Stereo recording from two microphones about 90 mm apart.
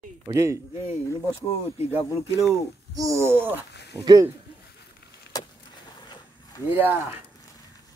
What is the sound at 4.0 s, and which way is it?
Speech, 40° right (ahead or behind).